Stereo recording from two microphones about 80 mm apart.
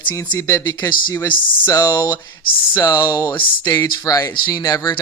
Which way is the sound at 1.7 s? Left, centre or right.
Left.